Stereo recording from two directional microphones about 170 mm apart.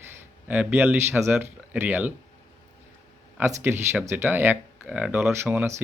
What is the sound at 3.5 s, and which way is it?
Speech, 15° right (ahead or behind).